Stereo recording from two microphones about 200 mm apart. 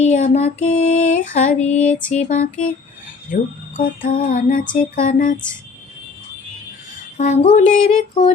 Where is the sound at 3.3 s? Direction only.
40° left (ahead or behind).